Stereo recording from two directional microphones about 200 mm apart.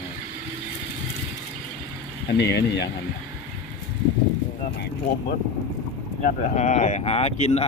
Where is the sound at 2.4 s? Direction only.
55° left (ahead or behind).